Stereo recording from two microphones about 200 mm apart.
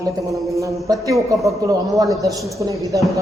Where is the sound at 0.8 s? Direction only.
15° right (ahead or behind).